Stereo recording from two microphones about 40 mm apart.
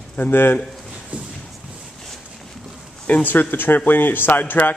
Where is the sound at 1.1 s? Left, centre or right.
Right.